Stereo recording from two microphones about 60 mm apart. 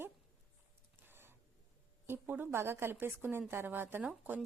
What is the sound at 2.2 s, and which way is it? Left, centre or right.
Speech, right.